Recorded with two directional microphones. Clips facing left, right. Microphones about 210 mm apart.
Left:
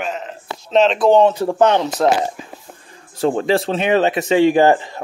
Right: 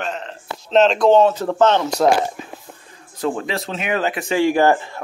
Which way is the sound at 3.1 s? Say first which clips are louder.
Left 6 dB; 30° left (ahead or behind).